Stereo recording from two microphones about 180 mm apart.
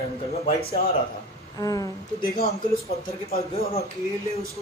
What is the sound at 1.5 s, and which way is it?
Speech, 20° left (ahead or behind).